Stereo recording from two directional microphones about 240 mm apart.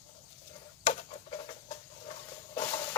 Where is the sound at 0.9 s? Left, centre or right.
Left.